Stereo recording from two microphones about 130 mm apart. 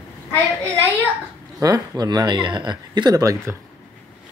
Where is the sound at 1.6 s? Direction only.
30° right (ahead or behind).